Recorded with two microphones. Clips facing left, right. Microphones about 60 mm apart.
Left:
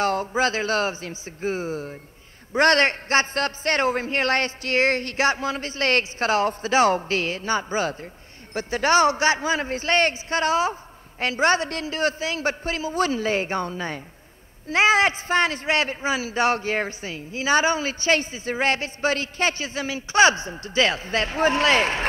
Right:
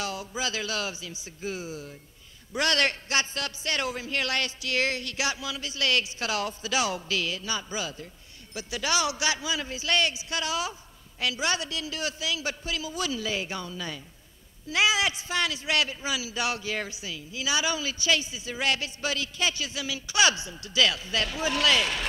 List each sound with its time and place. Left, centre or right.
0.0 s a man's voice: left